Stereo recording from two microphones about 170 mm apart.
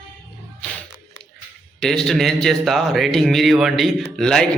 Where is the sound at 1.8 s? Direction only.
5° left (ahead or behind).